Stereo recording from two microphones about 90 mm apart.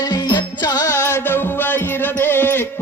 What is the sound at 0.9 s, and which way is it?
Music, 30° left (ahead or behind).